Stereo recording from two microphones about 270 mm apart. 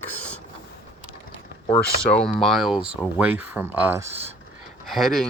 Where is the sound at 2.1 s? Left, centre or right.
Centre.